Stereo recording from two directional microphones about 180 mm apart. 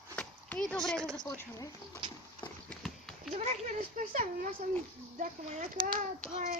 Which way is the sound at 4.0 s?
50° right (ahead or behind).